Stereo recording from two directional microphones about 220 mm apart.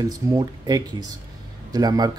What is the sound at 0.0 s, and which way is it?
Speech, 15° right (ahead or behind).